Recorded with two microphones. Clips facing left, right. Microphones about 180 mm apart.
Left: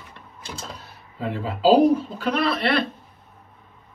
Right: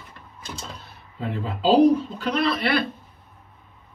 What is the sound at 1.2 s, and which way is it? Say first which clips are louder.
Speech: left 3 dB; 5° left (ahead or behind).